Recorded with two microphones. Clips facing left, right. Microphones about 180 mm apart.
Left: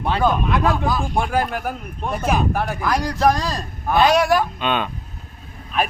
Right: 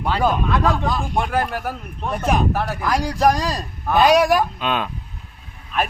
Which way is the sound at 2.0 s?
5° left (ahead or behind).